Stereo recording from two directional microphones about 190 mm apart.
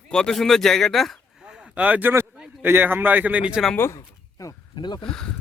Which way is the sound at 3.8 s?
15° left (ahead or behind).